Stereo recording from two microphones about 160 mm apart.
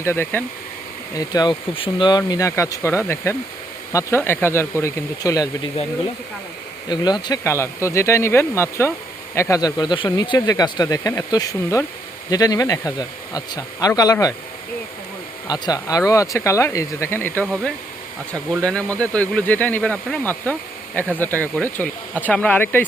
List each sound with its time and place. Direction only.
0.0 s speech: 15° left (ahead or behind)
6.8 s speech: 25° left (ahead or behind)
15.4 s speech: 25° left (ahead or behind)
18.6 s speech: 5° left (ahead or behind)